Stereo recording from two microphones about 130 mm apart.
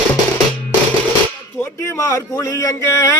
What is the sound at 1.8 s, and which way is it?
Speech, 20° left (ahead or behind).